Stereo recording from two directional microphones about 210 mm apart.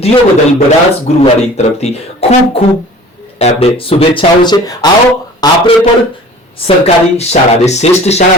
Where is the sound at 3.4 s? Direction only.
30° left (ahead or behind).